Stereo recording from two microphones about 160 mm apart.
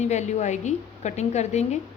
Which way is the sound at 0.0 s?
45° left (ahead or behind).